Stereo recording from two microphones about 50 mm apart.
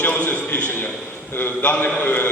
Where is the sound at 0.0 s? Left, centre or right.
Left.